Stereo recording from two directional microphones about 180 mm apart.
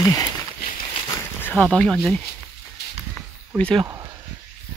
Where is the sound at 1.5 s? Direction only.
5° left (ahead or behind).